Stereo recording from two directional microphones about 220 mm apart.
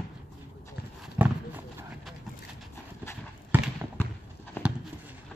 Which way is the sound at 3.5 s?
10° right (ahead or behind).